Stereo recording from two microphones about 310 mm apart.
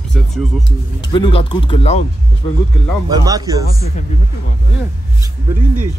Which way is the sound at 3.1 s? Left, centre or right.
Centre.